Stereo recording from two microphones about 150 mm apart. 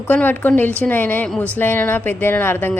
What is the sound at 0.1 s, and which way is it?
A woman's voice, 10° left (ahead or behind).